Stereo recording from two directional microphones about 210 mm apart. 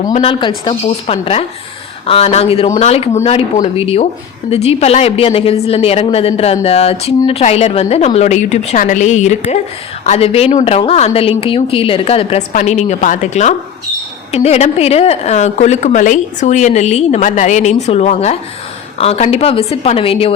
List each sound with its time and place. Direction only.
0.0 s a woman's voice: 35° left (ahead or behind)
0.3 s a woman's voice: 25° left (ahead or behind)